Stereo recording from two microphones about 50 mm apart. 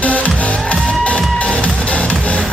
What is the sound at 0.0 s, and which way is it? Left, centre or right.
Music, left.